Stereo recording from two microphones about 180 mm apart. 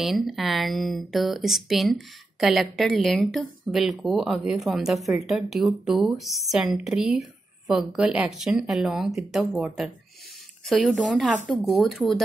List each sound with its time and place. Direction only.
0.0 s speech: centre (ahead or behind)